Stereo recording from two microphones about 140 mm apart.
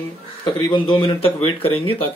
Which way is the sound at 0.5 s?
35° left (ahead or behind).